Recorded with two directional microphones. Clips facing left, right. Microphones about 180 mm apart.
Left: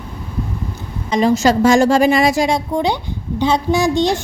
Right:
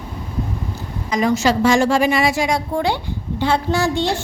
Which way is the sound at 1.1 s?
30° left (ahead or behind).